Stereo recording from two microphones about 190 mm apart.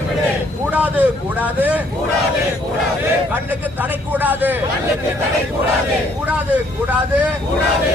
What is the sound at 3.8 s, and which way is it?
Speech, 10° right (ahead or behind).